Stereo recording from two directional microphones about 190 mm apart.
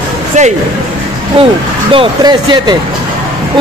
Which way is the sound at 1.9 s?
25° right (ahead or behind).